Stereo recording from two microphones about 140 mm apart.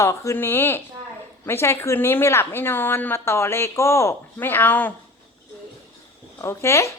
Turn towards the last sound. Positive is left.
turn(degrees=20)  # may be behind; listen again after turning